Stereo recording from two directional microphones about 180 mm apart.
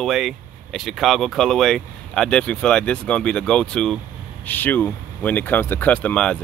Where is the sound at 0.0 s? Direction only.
Centre (ahead or behind).